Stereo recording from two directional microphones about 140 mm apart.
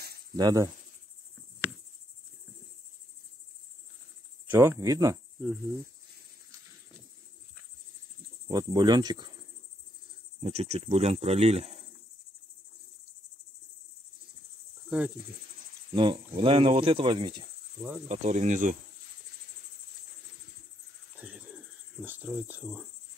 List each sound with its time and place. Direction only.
0.4 s speech: 30° right (ahead or behind)
4.5 s speech: 20° right (ahead or behind)
8.5 s speech: 30° right (ahead or behind)
10.4 s speech: 50° right (ahead or behind)
14.9 s cricket: 10° right (ahead or behind)
15.9 s speech: 35° right (ahead or behind)
18.0 s insect: 55° right (ahead or behind)
21.2 s cricket: 10° right (ahead or behind)
22.3 s speech: 10° right (ahead or behind)